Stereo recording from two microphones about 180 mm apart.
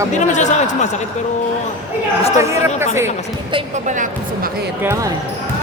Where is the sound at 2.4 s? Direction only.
15° right (ahead or behind).